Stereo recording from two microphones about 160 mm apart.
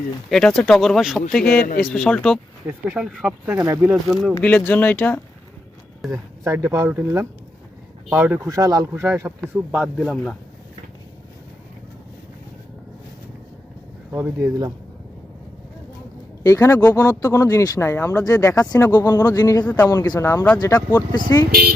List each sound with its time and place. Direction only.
0.3 s speech: 5° left (ahead or behind)
4.4 s speech: 10° left (ahead or behind)
6.1 s speech: 20° right (ahead or behind)
8.4 s speech: 20° right (ahead or behind); by 10.3 s centre (ahead or behind)
14.1 s speech: 15° right (ahead or behind)
16.4 s speech: 20° left (ahead or behind)